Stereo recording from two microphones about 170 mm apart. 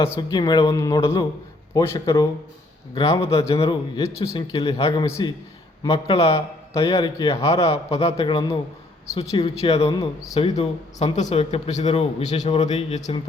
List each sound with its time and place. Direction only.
0.2 s speech: 25° left (ahead or behind)
3.2 s speech: 35° left (ahead or behind)
4.9 s speech: 15° left (ahead or behind)
5.9 s speech: 35° left (ahead or behind)
6.3 s speech: 20° left (ahead or behind)
7.6 s speech: 35° left (ahead or behind)
9.9 s speech: 20° left (ahead or behind)
10.3 s speech: 40° left (ahead or behind)